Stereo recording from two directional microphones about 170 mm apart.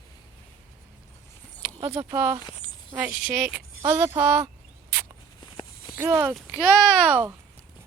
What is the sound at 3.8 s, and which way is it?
Speech, 20° right (ahead or behind).